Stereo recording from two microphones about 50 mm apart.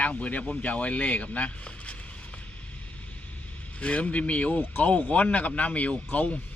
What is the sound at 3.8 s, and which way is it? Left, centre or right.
Speech, left.